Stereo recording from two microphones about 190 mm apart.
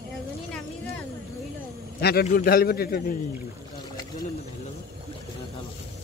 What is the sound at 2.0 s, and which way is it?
Speech, 55° left (ahead or behind).